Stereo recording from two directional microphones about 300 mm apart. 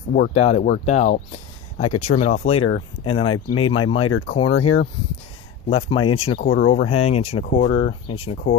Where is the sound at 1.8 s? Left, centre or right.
Left.